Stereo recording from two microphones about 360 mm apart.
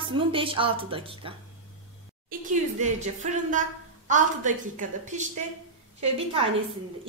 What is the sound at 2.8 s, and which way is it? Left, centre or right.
A woman's voice, centre.